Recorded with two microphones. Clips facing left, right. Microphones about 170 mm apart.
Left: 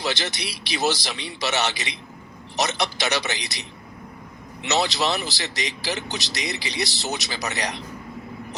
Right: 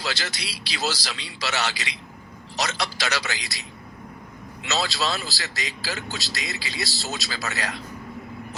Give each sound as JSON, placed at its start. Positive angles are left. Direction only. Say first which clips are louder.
{"t": 0.0, "sound": "speech", "louder": "left 4 dB", "side_deg": 20}